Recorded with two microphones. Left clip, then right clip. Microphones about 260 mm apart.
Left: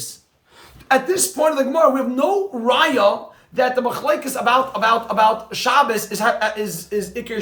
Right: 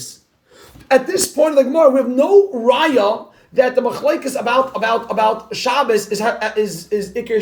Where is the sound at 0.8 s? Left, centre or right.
Centre.